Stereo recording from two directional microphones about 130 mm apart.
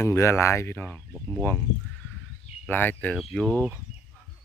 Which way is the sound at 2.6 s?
15° left (ahead or behind).